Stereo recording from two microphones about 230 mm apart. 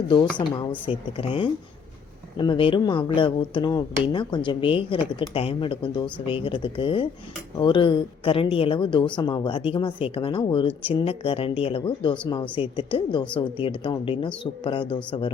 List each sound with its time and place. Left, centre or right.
0.1 s speech: centre